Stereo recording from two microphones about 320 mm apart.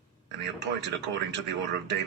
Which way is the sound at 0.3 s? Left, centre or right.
Right.